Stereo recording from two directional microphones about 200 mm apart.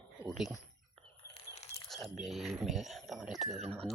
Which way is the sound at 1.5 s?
35° left (ahead or behind).